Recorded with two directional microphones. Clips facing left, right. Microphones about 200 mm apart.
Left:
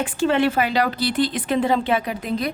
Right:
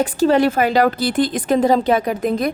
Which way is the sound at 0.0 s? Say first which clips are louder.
Right 5 dB; 40° right (ahead or behind).